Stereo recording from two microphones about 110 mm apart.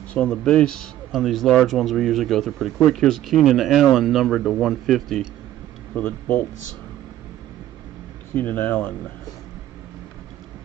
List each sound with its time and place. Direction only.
0.1 s speech: 10° left (ahead or behind)
5.9 s speech: 15° left (ahead or behind)
8.4 s speech: 15° left (ahead or behind)